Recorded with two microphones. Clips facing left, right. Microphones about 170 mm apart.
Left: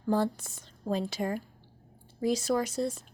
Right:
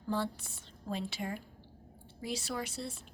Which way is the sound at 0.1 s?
45° left (ahead or behind).